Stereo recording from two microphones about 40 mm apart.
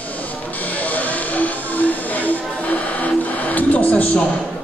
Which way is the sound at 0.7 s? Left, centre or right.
Left.